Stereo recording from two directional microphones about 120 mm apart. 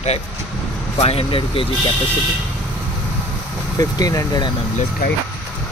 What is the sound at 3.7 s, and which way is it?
Speech, 30° left (ahead or behind).